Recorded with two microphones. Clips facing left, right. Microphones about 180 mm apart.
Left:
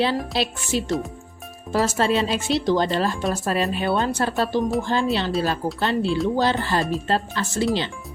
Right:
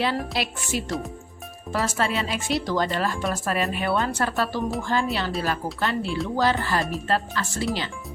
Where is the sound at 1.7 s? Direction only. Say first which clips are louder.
Left 5 dB; 30° left (ahead or behind).